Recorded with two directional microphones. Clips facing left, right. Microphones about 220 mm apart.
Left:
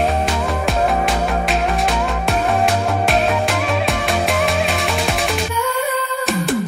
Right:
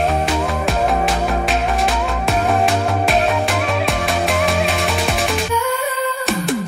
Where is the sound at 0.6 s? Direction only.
Centre (ahead or behind).